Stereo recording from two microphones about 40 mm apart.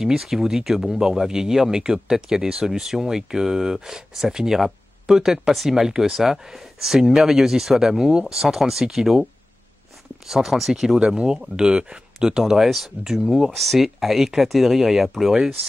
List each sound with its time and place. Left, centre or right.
0.0 s speech: centre
10.2 s speech: centre
11.0 s speech: right
13.5 s speech: centre